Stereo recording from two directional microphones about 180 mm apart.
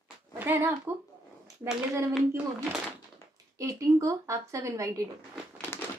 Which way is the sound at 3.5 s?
15° right (ahead or behind).